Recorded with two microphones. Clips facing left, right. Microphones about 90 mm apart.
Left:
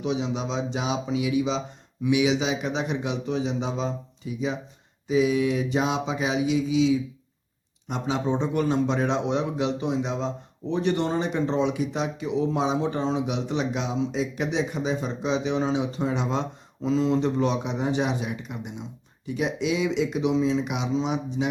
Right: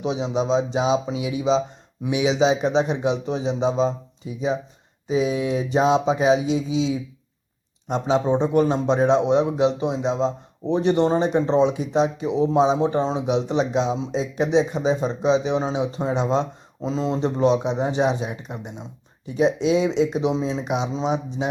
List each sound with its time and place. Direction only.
0.0 s a man's voice: 25° right (ahead or behind)